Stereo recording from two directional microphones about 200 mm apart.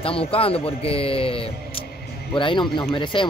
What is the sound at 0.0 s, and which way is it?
Speech, 30° left (ahead or behind).